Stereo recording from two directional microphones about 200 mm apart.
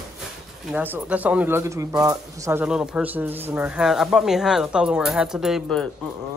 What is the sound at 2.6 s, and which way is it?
Speech, 5° right (ahead or behind).